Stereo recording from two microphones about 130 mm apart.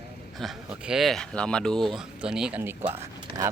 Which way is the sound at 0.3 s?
Centre (ahead or behind).